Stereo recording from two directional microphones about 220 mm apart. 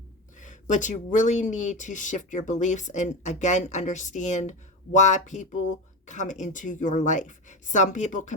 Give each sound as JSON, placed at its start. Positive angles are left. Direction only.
{"t": 0.3, "sound": "speech", "side_deg": 35}